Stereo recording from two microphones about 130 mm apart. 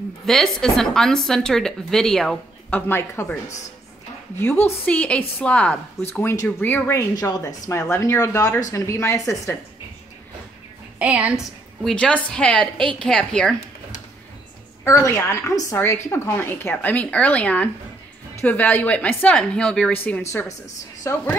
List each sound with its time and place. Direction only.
0.3 s a woman's voice: 5° left (ahead or behind)
2.9 s a woman's voice: 20° left (ahead or behind)
4.6 s a woman's voice: 10° left (ahead or behind)
11.0 s a woman's voice: 10° right (ahead or behind)
11.8 s a woman's voice: 10° left (ahead or behind)
14.9 s a woman's voice: 25° left (ahead or behind)